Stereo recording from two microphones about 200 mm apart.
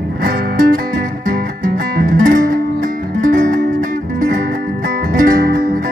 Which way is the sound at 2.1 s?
40° right (ahead or behind).